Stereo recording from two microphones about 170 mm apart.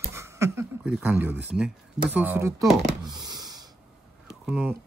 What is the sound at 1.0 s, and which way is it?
Speech, 10° right (ahead or behind).